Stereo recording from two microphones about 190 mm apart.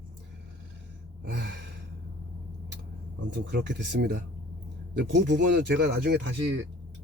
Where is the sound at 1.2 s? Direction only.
65° right (ahead or behind).